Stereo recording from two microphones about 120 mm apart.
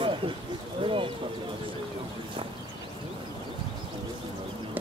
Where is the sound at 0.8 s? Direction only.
50° right (ahead or behind).